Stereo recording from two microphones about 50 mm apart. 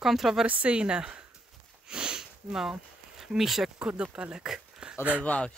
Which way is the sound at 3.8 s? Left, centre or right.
Right.